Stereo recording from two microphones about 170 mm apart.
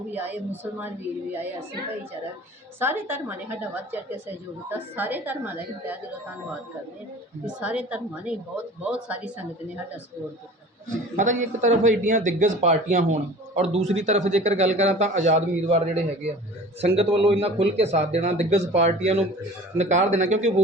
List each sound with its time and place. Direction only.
0.1 s a woman's voice: 10° right (ahead or behind)
2.7 s a woman's voice: 10° right (ahead or behind)
7.4 s a woman's voice: 5° right (ahead or behind)
10.8 s a man's voice: 45° right (ahead or behind)
16.8 s a man's voice: 35° right (ahead or behind)